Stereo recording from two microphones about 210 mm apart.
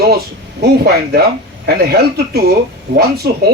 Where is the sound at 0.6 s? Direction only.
50° right (ahead or behind).